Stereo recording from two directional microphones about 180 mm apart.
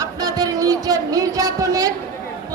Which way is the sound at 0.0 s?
20° right (ahead or behind).